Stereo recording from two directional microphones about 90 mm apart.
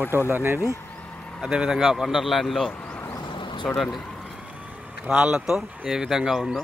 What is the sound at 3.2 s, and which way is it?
Vehicle, 65° left (ahead or behind).